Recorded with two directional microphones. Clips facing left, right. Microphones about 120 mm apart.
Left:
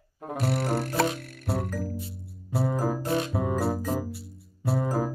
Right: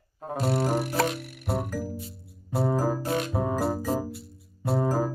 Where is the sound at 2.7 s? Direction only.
30° right (ahead or behind).